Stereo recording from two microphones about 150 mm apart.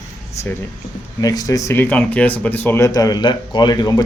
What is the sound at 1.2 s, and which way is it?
Speech, 25° left (ahead or behind).